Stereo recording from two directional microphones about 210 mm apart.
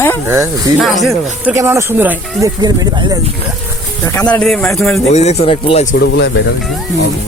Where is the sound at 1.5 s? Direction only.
15° right (ahead or behind).